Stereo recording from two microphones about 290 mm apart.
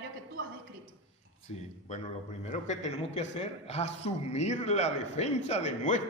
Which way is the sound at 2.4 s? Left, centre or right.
Left.